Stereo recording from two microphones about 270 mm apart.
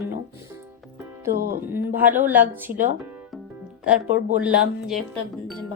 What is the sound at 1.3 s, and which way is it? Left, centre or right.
Music, right.